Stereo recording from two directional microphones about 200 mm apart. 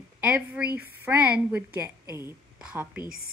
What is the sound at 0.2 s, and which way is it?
A woman's voice, 5° right (ahead or behind).